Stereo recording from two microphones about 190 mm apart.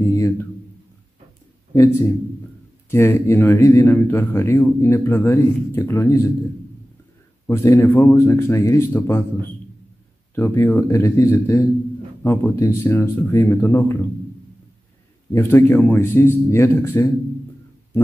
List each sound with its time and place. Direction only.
0.0 s a sound: 15° left (ahead or behind)
2.9 s speech: 15° left (ahead or behind)
7.4 s speech: 15° left (ahead or behind)
10.3 s speech: 15° left (ahead or behind)
15.3 s speech: 10° left (ahead or behind)